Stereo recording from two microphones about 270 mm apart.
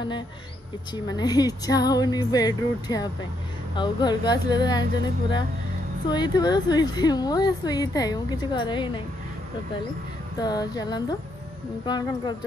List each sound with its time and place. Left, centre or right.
0.9 s a woman's voice: centre
6.0 s a woman's voice: centre
10.4 s a woman's voice: centre